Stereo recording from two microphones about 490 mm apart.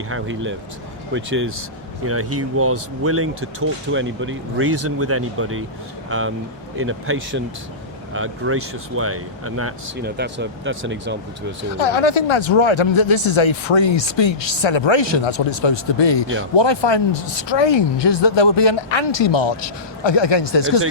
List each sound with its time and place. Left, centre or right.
0.1 s speech: right
11.8 s speech: left